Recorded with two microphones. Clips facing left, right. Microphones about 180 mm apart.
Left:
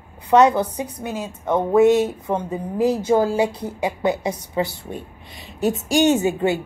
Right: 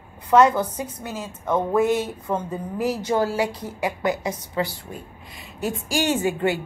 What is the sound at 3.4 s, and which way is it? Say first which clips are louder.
Speech: left 3 dB; 60° left (ahead or behind).